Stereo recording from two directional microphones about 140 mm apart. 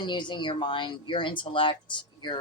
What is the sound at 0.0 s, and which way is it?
Speech, 35° left (ahead or behind).